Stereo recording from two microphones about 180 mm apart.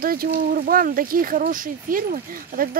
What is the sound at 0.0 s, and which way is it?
Speech, 55° right (ahead or behind).